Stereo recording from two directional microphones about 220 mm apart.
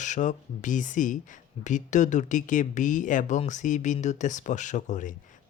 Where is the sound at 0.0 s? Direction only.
35° left (ahead or behind).